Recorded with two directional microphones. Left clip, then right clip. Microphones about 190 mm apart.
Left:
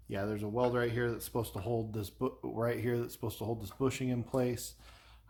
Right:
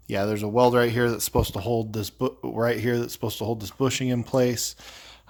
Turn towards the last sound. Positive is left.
turn(degrees=-50)  # may be behind; listen again after turning